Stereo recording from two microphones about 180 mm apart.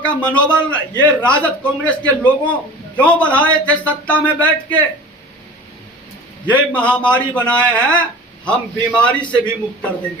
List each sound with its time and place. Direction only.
0.3 s a man's voice: 5° left (ahead or behind)
6.5 s a man's voice: 5° left (ahead or behind)